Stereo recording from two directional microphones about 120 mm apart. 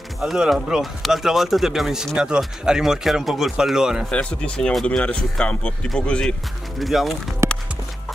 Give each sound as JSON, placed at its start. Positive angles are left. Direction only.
{"t": 0.2, "sound": "speech", "side_deg": -5}
{"t": 4.1, "sound": "speech", "side_deg": 10}
{"t": 7.4, "sound": "music", "side_deg": -25}